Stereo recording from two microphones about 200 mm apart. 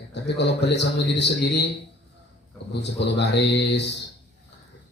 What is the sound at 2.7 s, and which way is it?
A man's voice, 60° left (ahead or behind).